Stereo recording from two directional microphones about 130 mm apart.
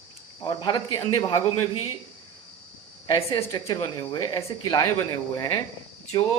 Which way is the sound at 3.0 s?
40° left (ahead or behind).